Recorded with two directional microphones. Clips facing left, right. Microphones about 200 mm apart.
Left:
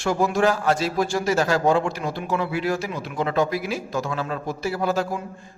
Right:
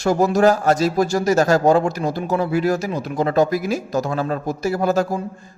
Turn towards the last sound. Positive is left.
turn(degrees=-45)  # may be behind; listen again after turning